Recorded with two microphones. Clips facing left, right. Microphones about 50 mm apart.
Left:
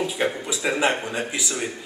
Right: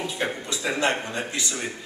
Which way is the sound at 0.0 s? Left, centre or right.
Centre.